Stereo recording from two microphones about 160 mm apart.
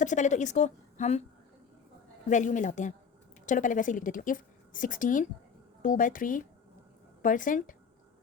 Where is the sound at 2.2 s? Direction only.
50° left (ahead or behind).